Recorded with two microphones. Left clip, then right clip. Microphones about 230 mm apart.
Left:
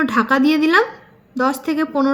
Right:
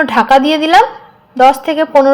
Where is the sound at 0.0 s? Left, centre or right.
Centre.